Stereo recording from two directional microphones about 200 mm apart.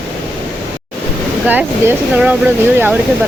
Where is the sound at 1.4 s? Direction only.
10° right (ahead or behind).